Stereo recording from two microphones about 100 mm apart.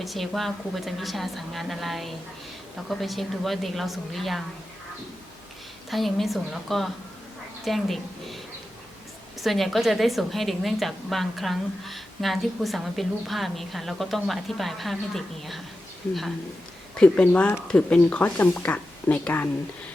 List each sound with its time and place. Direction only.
0.0 s a woman's voice: centre (ahead or behind)
5.9 s a woman's voice: centre (ahead or behind)
9.4 s a woman's voice: centre (ahead or behind)
17.0 s speech: 10° left (ahead or behind)